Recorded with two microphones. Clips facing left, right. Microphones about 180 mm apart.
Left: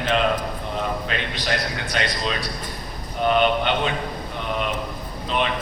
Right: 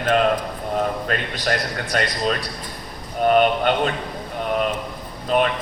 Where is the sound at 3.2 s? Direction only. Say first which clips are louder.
Right 3 dB; 45° right (ahead or behind).